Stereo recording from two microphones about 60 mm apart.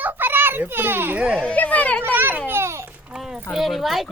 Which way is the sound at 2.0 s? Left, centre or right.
Right.